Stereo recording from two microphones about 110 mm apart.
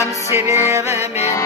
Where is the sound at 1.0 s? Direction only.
80° left.